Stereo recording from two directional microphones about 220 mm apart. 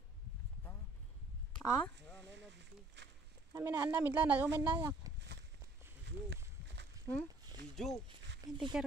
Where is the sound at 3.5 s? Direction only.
10° right (ahead or behind).